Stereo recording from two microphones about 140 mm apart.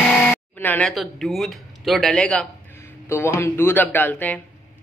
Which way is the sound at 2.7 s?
20° left (ahead or behind).